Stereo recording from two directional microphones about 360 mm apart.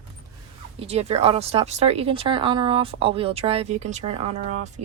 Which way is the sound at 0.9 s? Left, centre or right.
Centre.